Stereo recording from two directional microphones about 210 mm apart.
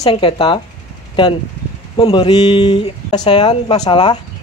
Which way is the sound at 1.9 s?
25° left (ahead or behind).